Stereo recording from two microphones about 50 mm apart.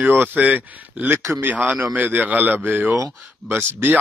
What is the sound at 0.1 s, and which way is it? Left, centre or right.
Speech, right.